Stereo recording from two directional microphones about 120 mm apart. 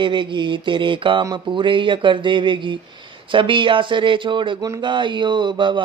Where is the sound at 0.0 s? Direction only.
40° right (ahead or behind).